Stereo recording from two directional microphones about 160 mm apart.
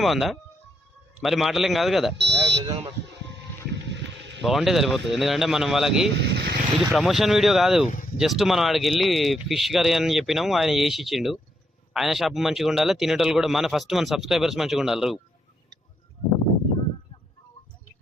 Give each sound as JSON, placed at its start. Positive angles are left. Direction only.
{"t": 0.0, "sound": "a man's voice", "side_deg": 0}
{"t": 2.1, "sound": "fire alarm", "side_deg": -90}
{"t": 2.4, "sound": "a sound", "side_deg": -35}
{"t": 4.4, "sound": "a man's voice", "side_deg": 0}
{"t": 6.1, "sound": "speech", "side_deg": -90}
{"t": 6.7, "sound": "a man's voice", "side_deg": 0}
{"t": 7.9, "sound": "speech", "side_deg": 50}
{"t": 8.2, "sound": "a man's voice", "side_deg": 0}